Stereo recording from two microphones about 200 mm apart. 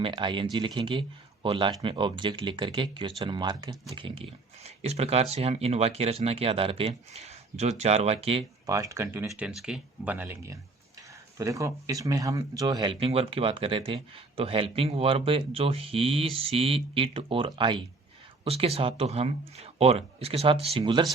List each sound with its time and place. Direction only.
0.0 s speech: 25° right (ahead or behind)
8.7 s speech: 15° right (ahead or behind)